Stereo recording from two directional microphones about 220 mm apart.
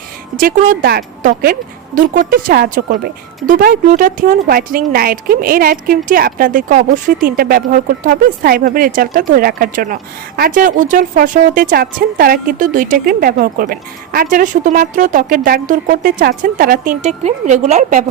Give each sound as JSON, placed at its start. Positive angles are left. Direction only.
{"t": 0.3, "sound": "speech", "side_deg": -40}